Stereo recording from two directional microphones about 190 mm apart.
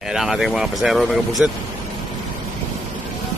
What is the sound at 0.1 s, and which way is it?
Speech, centre (ahead or behind).